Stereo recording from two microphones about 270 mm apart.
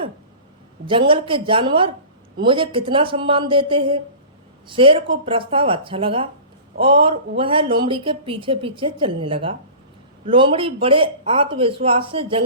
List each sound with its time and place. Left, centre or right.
0.9 s speech: centre